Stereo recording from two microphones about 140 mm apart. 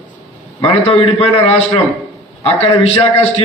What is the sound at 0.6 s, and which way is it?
A man's voice, 45° left (ahead or behind).